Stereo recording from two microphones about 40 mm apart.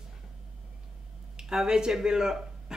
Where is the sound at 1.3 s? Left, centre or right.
Centre.